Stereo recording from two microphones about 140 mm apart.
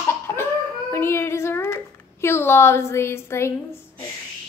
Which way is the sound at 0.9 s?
20° left (ahead or behind).